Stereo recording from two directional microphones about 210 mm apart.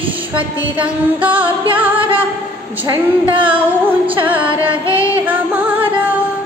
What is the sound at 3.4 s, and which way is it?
Female singing, 5° right (ahead or behind).